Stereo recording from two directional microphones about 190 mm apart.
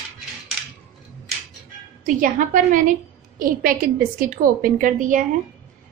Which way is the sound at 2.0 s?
45° right (ahead or behind).